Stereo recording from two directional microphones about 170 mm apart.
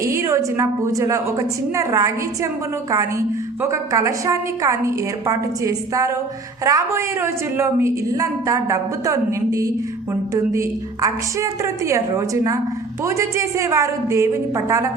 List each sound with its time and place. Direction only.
0.0 s a woman's voice: 15° right (ahead or behind)